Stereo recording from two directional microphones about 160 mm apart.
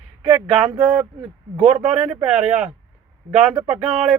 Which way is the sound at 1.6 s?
35° right (ahead or behind).